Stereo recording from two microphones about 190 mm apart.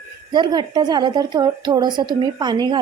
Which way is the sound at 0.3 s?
25° right (ahead or behind).